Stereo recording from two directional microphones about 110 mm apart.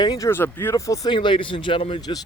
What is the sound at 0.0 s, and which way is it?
Speech, 40° left (ahead or behind).